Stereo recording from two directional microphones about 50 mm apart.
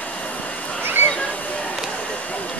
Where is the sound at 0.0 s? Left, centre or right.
Left.